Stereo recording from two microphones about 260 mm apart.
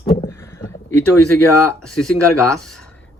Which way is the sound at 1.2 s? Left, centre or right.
Left.